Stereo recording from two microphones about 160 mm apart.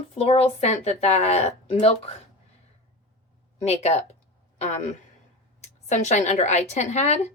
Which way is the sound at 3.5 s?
45° left (ahead or behind).